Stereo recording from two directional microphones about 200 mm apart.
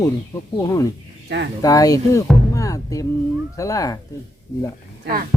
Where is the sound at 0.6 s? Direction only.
15° left (ahead or behind).